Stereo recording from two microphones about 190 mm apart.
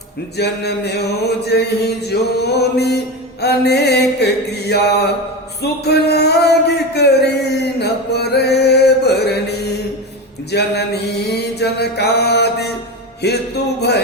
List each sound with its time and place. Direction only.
0.3 s mantra: 60° left (ahead or behind)
5.8 s music: 60° left (ahead or behind)
10.5 s mantra: 60° left (ahead or behind)